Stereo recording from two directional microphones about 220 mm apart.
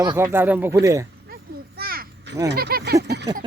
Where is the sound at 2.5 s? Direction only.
45° right (ahead or behind).